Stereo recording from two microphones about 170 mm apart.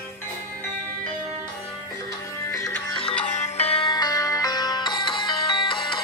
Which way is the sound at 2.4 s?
20° left (ahead or behind).